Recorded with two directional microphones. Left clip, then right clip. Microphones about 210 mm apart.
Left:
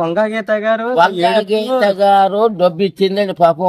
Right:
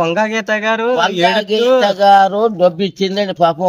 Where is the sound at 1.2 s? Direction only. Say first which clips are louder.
Right 1 dB; 10° left (ahead or behind).